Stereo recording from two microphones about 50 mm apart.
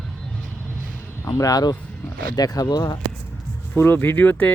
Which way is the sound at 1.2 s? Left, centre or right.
Left.